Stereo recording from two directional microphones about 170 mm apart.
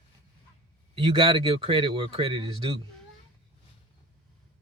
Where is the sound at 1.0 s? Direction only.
30° right (ahead or behind).